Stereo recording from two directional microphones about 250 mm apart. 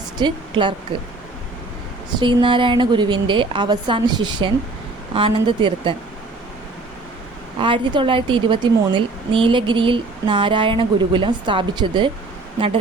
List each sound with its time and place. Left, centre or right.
0.2 s a woman's voice: centre
2.1 s speech: centre
7.6 s speech: centre